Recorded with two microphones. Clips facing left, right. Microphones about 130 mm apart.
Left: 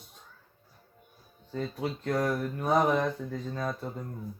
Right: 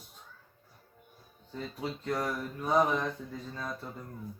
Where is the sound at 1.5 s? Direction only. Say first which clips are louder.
Left 4 dB; 55° left (ahead or behind).